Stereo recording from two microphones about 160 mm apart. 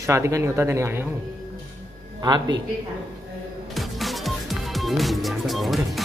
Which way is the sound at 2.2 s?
25° right (ahead or behind).